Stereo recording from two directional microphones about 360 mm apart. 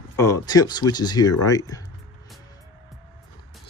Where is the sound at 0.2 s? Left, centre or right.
Centre.